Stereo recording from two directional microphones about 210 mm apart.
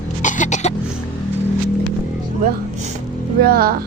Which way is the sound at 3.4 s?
45° right (ahead or behind).